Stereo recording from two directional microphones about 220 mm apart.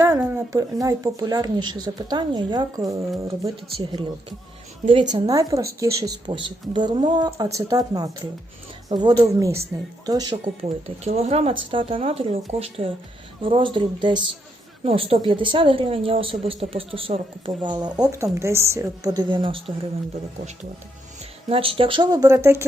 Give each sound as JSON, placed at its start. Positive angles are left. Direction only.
{"t": 0.0, "sound": "a woman's voice", "side_deg": -15}
{"t": 5.1, "sound": "a woman's voice", "side_deg": -15}
{"t": 21.5, "sound": "a woman's voice", "side_deg": -25}